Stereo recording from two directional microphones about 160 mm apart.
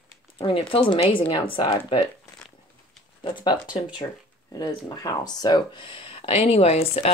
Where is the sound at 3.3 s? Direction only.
25° left (ahead or behind).